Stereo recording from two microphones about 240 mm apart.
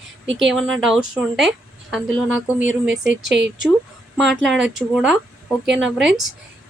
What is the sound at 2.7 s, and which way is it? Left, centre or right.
Speech, right.